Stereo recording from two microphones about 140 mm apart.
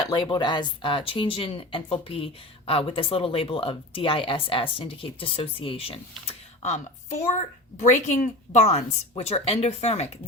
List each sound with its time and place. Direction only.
0.1 s a woman's voice: 30° left (ahead or behind); by 10.1 s 50° left (ahead or behind)